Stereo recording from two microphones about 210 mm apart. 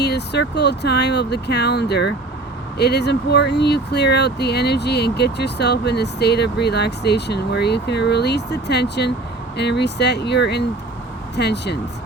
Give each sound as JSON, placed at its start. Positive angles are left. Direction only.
{"t": 0.0, "sound": "speech", "side_deg": 50}